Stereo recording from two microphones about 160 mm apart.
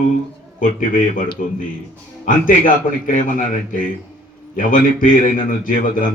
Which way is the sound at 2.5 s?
55° left (ahead or behind).